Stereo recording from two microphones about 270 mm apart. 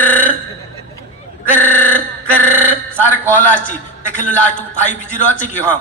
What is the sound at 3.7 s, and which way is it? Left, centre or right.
A man's voice, left.